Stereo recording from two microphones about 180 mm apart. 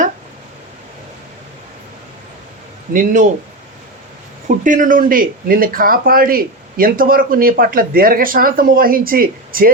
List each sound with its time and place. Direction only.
2.9 s speech: 45° right (ahead or behind)
4.4 s speech: 45° right (ahead or behind)